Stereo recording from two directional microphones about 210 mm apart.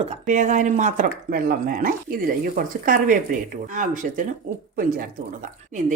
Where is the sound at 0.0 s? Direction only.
35° right (ahead or behind).